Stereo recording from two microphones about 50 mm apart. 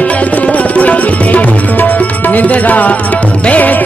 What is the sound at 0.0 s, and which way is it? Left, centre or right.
Tabla, left.